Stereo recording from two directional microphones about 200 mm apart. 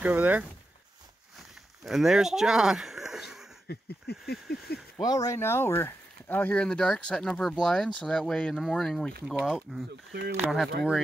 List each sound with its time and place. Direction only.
0.0 s speech: 10° right (ahead or behind)
1.9 s speech: centre (ahead or behind)
3.6 s a sound: 55° left (ahead or behind)
5.0 s speech: 15° left (ahead or behind); by 10.7 s 5° right (ahead or behind)